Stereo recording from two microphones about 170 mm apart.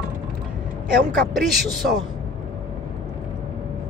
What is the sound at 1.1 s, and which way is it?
Speech, centre (ahead or behind).